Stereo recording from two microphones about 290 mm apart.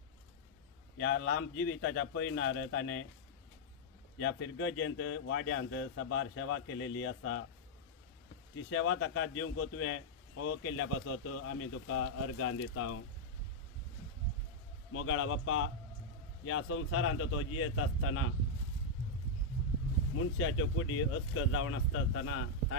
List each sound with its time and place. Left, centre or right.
1.0 s speech: left
4.2 s speech: left
8.6 s speech: left
14.9 s speech: left
20.3 s speech: left